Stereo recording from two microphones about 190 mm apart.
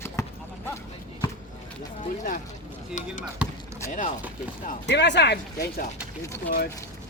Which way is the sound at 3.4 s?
5° right (ahead or behind).